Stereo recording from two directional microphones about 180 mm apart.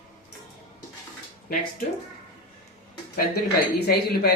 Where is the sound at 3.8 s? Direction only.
60° left (ahead or behind).